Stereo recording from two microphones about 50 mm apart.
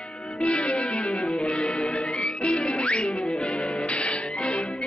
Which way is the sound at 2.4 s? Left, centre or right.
Left.